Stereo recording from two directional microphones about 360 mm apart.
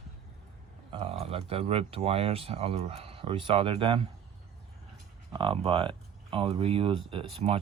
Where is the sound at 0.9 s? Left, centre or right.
Centre.